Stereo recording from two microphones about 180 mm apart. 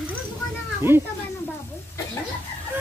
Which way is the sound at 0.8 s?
15° right (ahead or behind).